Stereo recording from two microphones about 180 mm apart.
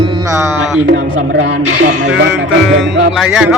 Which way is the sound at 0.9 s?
80° right.